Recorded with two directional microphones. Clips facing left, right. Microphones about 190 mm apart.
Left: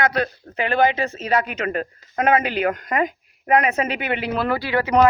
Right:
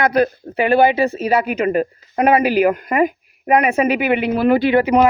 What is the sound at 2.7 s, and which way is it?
Speech, 10° right (ahead or behind).